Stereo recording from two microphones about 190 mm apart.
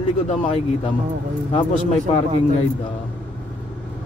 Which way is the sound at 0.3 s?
30° left (ahead or behind).